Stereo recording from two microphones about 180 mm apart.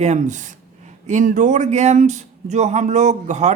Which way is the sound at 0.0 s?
40° right (ahead or behind).